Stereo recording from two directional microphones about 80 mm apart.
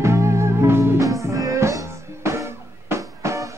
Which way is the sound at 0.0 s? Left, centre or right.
Right.